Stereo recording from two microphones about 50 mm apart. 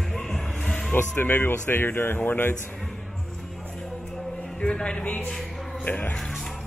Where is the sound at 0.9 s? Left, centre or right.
Left.